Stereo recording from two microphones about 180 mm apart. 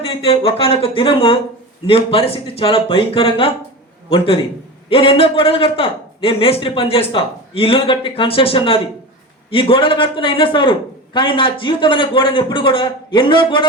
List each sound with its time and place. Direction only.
0.0 s a man's voice: 30° left (ahead or behind)